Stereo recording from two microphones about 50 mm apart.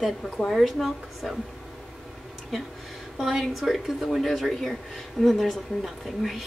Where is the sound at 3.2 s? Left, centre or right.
Centre.